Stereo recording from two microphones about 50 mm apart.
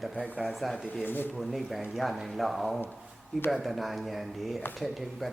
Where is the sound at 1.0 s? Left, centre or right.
Left.